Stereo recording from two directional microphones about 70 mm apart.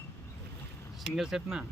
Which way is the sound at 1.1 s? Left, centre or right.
Centre.